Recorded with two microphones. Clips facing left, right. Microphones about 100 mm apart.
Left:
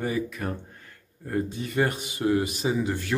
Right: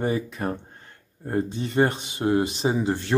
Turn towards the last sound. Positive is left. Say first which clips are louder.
# right 3 dB
turn(degrees=-30)  # may be behind; listen again after turning